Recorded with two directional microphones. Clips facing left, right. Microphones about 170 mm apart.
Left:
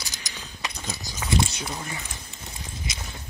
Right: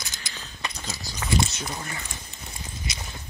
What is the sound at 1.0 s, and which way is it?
Speech, 15° left (ahead or behind).